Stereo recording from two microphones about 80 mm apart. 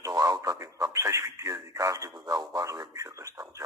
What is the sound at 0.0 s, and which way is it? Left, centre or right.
Speech, right.